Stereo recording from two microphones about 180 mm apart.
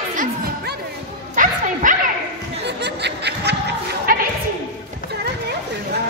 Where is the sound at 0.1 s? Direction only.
50° right (ahead or behind).